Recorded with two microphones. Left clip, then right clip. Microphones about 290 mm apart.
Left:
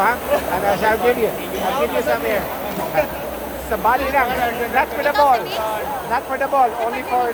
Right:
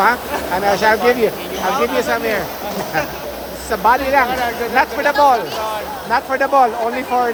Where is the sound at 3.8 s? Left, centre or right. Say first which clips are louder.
Right 4 dB; right.